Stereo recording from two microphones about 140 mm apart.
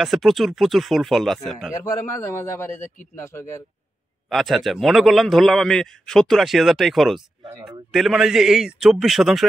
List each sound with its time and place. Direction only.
0.0 s a man's voice: centre (ahead or behind)
1.7 s a man's voice: 20° left (ahead or behind)
4.3 s a man's voice: centre (ahead or behind)